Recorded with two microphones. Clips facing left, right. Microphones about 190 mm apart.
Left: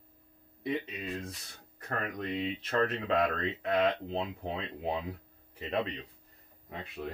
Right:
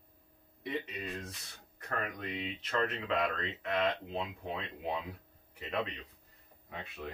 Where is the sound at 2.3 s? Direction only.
30° left (ahead or behind).